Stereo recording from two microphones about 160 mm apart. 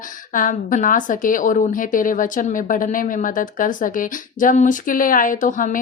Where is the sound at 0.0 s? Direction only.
55° left (ahead or behind).